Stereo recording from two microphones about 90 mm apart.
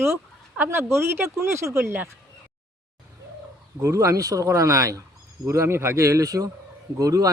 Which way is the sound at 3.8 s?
35° right (ahead or behind).